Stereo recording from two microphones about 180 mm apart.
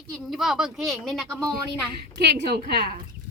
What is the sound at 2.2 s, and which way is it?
Speech, 70° right (ahead or behind).